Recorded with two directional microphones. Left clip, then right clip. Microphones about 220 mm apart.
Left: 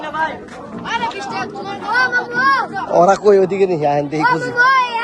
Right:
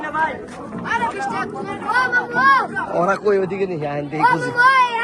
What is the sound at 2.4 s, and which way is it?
Speech, 50° right (ahead or behind).